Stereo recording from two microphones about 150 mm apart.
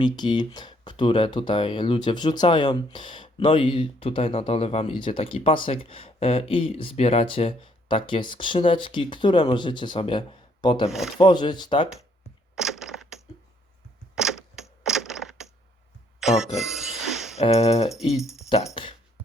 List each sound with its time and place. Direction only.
0.0 s speech: 30° left (ahead or behind)
12.5 s crushing: 5° right (ahead or behind)
14.2 s a sound: 5° right (ahead or behind)
17.3 s a sound: 45° left (ahead or behind)
17.8 s speech: centre (ahead or behind)
18.4 s speech: 45° left (ahead or behind)